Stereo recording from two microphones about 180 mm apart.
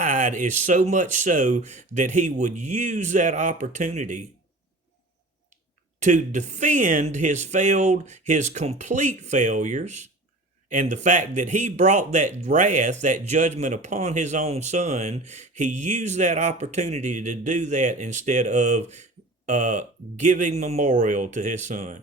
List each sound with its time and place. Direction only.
0.0 s speech: 45° right (ahead or behind)
6.0 s speech: 40° right (ahead or behind)